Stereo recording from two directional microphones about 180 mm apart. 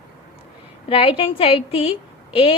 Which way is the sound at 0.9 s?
30° left (ahead or behind).